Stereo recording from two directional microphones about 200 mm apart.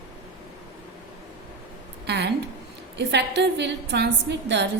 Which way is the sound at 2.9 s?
60° right (ahead or behind).